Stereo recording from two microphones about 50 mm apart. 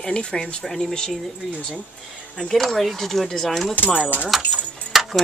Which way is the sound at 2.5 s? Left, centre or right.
Centre.